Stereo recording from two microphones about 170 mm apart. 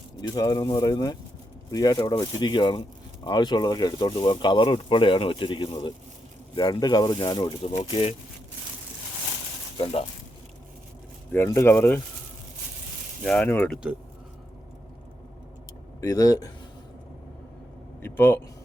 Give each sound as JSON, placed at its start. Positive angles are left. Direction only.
{"t": 0.2, "sound": "speech", "side_deg": 20}
{"t": 9.7, "sound": "speech", "side_deg": 35}
{"t": 11.3, "sound": "speech", "side_deg": 15}
{"t": 13.2, "sound": "speech", "side_deg": 10}
{"t": 16.0, "sound": "speech", "side_deg": 20}
{"t": 18.0, "sound": "a man's voice", "side_deg": 15}